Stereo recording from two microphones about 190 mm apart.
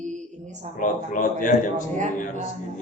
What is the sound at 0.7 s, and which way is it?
Speech, 45° left (ahead or behind).